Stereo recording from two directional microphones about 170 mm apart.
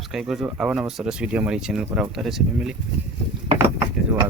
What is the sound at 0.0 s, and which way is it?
Speech, centre (ahead or behind).